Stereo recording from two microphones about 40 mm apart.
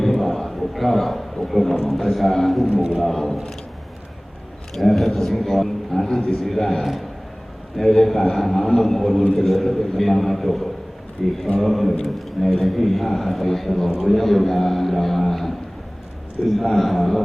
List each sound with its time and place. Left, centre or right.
0.0 s a sound: centre
1.5 s a man's voice: centre
4.7 s a man's voice: centre
16.6 s a man's voice: centre